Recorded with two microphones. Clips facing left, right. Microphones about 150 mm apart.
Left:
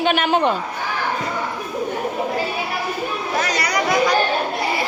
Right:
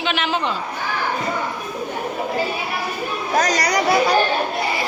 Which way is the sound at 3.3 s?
40° right (ahead or behind).